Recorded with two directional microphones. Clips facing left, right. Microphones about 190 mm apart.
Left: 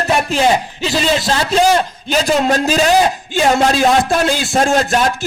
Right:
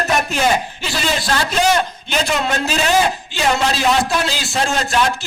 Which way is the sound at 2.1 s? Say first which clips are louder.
Left 7 dB; 40° left (ahead or behind).